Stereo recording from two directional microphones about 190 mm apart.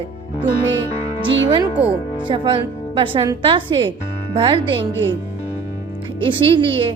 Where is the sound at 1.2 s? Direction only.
25° right (ahead or behind).